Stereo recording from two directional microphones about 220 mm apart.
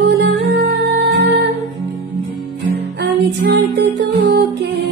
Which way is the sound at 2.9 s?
50° right (ahead or behind).